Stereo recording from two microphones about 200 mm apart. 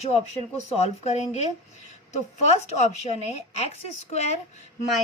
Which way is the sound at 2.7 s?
35° left (ahead or behind).